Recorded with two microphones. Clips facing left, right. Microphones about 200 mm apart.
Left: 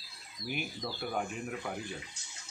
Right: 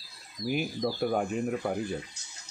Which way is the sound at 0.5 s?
40° right (ahead or behind).